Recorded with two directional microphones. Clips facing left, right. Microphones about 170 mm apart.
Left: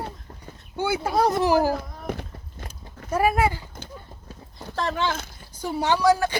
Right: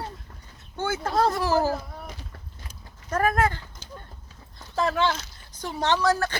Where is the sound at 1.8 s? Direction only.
60° left (ahead or behind).